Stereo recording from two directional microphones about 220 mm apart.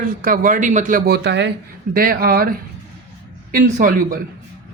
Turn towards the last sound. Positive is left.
turn(degrees=-40)  # may be behind; listen again after turning